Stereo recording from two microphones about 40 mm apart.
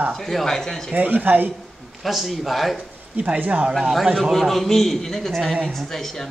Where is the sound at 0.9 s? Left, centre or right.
Right.